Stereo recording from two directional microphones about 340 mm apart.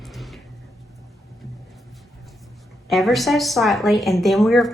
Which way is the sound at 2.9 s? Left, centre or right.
Centre.